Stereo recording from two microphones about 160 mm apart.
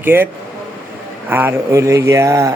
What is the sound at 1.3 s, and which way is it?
Speech, 15° right (ahead or behind).